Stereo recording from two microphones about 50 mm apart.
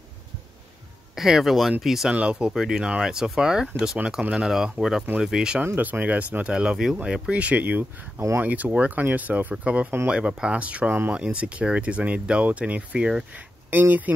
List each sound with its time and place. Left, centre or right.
1.1 s speech: centre
2.1 s speech: right
2.5 s speech: centre
4.2 s speech: right
4.5 s speech: centre
5.8 s speech: right
6.5 s speech: centre
13.7 s speech: right